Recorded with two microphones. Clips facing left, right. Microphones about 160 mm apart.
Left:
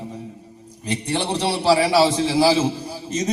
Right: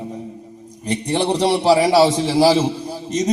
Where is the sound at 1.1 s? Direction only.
40° right (ahead or behind).